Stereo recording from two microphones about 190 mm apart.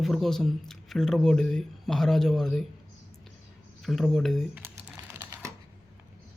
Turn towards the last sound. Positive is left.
turn(degrees=-10)  # may be behind; listen again after turning